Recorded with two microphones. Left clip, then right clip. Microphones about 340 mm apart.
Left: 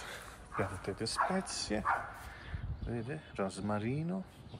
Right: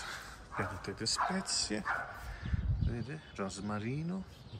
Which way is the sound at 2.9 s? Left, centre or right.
Centre.